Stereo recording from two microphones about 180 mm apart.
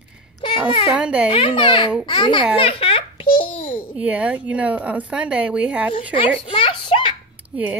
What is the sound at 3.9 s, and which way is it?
Speech, 5° right (ahead or behind).